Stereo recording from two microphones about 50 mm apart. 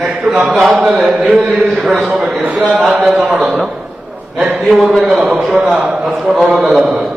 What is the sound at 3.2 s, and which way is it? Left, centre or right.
Speech, right.